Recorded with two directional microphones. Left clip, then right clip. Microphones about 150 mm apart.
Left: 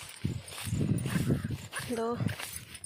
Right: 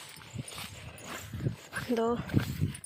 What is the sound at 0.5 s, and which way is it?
Horse, centre (ahead or behind).